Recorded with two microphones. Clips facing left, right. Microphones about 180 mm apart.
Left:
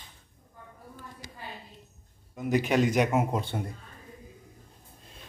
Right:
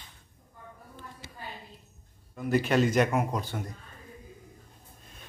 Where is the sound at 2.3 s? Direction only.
20° left (ahead or behind).